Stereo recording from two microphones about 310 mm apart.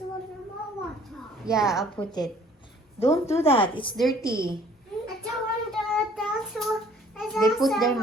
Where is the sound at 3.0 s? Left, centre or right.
Centre.